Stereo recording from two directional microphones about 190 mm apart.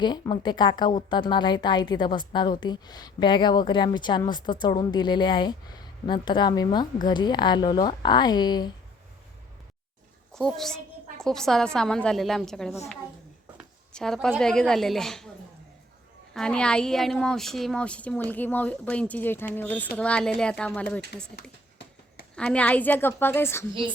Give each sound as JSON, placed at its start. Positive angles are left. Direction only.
{"t": 0.0, "sound": "a woman's voice", "side_deg": 20}
{"t": 10.3, "sound": "speech", "side_deg": 5}
{"t": 13.9, "sound": "speech", "side_deg": 5}
{"t": 16.3, "sound": "speech", "side_deg": 5}
{"t": 22.4, "sound": "speech", "side_deg": 5}